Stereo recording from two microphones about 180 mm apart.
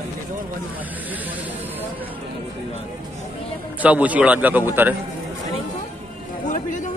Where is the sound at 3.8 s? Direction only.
10° right (ahead or behind).